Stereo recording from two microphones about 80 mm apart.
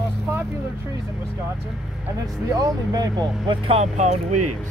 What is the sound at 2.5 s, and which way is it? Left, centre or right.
Speech, right.